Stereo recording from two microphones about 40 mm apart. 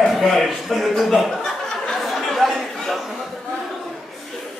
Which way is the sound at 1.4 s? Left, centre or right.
Centre.